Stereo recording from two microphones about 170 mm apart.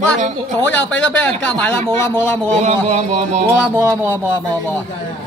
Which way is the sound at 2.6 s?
40° right (ahead or behind).